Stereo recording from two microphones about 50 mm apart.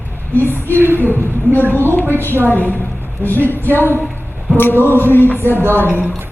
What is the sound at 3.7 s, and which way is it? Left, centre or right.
Speech, left.